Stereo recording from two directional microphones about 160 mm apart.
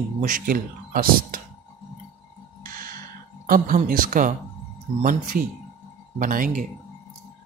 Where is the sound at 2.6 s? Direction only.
65° right (ahead or behind).